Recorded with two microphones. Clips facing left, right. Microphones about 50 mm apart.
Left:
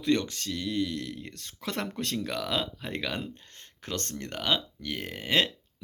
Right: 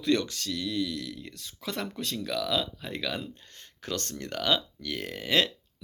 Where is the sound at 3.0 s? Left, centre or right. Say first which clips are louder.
Even; left.